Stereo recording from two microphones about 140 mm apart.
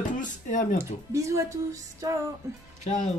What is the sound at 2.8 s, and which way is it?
Speech, 60° left (ahead or behind).